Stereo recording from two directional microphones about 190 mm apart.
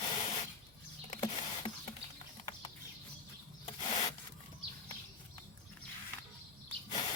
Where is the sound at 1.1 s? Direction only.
30° left (ahead or behind).